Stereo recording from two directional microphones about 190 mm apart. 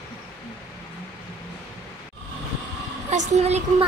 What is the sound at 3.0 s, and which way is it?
Speech, 40° right (ahead or behind).